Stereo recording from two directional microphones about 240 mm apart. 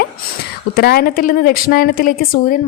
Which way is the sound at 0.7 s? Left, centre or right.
Left.